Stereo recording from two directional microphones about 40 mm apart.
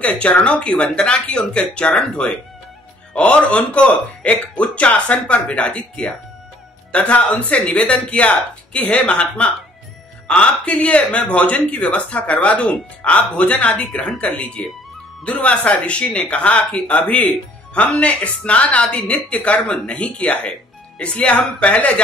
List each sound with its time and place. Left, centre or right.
0.2 s speech: left
3.1 s speech: left
10.7 s speech: left